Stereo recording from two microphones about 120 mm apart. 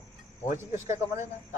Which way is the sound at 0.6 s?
20° right (ahead or behind).